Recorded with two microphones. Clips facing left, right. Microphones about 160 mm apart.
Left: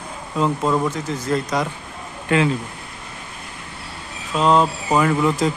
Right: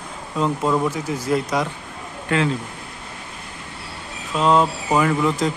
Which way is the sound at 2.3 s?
20° left (ahead or behind).